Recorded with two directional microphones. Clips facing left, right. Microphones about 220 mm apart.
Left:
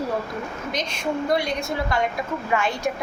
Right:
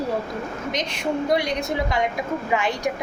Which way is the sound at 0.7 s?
20° right (ahead or behind).